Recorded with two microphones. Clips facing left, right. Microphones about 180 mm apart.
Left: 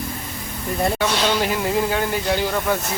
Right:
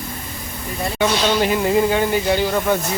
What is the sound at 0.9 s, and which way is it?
Speech, centre (ahead or behind).